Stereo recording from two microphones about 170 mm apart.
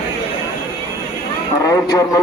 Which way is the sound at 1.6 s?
20° left (ahead or behind).